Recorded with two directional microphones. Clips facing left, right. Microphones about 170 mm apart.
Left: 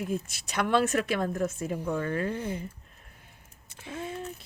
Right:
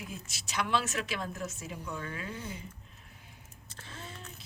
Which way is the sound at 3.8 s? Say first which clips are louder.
Left 11 dB; 50° left (ahead or behind).